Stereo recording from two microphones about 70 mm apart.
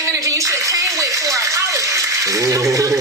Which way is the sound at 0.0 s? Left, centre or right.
Right.